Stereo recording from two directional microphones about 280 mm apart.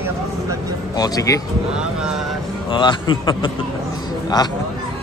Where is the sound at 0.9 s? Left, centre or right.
Centre.